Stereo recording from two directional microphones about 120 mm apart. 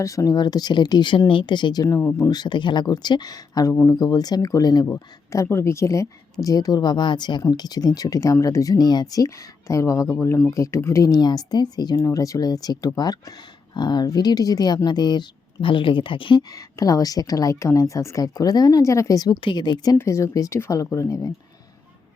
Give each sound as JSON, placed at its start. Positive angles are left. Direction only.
{"t": 0.0, "sound": "speech", "side_deg": 25}
{"t": 16.5, "sound": "speech", "side_deg": 30}
{"t": 20.0, "sound": "speech", "side_deg": 25}